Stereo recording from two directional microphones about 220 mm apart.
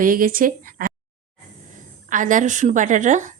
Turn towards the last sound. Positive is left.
turn(degrees=-35)  # may be behind; listen again after turning